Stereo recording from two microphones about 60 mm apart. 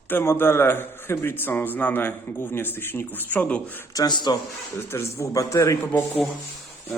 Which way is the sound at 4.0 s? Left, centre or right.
Left.